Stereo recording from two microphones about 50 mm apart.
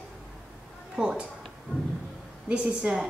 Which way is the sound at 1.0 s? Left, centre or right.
Centre.